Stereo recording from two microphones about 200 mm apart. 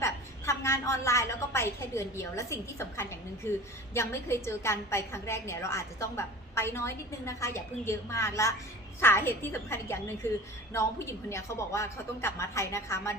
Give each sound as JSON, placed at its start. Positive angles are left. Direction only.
{"t": 0.0, "sound": "a woman's voice", "side_deg": 15}